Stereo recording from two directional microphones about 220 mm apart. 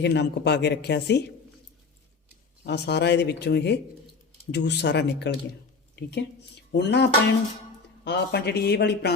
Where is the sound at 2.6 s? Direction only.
50° left (ahead or behind).